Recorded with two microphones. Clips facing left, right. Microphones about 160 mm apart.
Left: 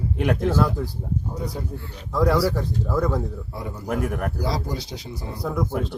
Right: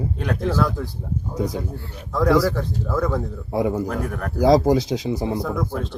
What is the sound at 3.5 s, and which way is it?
Speech, 90° right.